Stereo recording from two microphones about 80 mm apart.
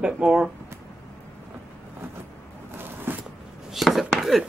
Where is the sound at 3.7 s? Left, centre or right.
Centre.